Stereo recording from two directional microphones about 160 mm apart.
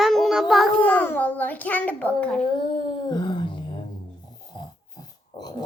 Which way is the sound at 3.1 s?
30° left (ahead or behind).